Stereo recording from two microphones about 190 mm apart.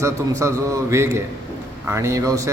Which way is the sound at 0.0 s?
15° right (ahead or behind).